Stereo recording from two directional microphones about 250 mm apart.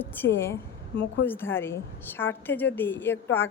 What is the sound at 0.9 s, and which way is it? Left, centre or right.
Speech, left.